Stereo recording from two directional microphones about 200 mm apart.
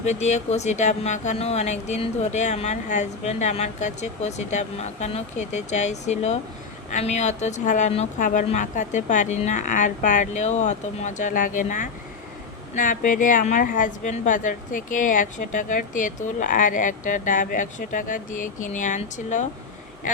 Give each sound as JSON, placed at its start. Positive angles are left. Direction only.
{"t": 0.0, "sound": "a woman's voice", "side_deg": 35}